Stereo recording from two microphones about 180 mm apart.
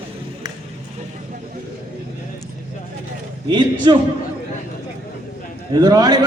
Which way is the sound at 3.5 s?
25° right (ahead or behind).